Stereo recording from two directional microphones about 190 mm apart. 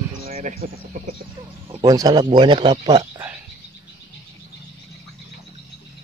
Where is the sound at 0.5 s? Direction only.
40° right (ahead or behind).